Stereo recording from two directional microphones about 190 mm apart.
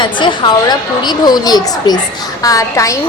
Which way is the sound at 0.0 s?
25° left (ahead or behind).